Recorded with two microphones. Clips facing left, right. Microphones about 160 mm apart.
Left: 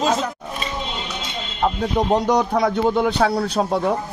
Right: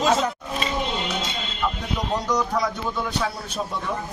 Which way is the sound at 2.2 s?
55° left (ahead or behind).